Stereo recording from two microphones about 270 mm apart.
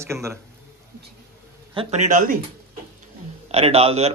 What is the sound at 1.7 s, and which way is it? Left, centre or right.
Speech, right.